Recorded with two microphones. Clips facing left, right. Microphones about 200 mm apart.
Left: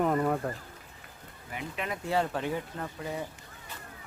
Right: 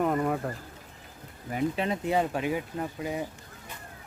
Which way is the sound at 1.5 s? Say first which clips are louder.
Right 8 dB; 35° right (ahead or behind).